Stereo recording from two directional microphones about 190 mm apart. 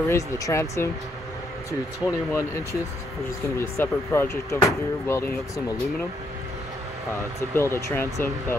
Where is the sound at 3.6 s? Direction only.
15° left (ahead or behind).